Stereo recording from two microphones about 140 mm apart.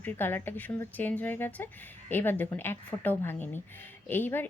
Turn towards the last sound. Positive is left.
turn(degrees=15)  # may be behind; listen again after turning